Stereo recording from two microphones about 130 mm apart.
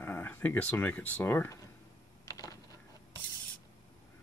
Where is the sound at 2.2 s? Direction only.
25° left (ahead or behind).